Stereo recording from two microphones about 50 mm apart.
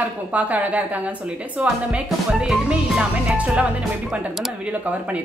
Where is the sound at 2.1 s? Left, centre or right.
Centre.